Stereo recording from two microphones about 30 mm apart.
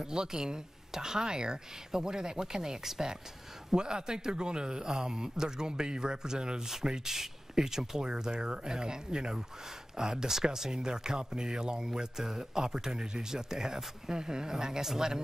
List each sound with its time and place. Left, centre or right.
0.0 s speech: right
2.8 s speech: centre
3.7 s speech: right